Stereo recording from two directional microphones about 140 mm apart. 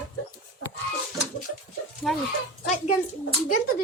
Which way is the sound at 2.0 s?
Centre (ahead or behind).